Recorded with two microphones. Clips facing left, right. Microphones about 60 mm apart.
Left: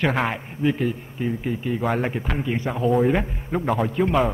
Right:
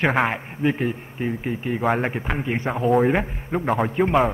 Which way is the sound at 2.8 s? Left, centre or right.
Right.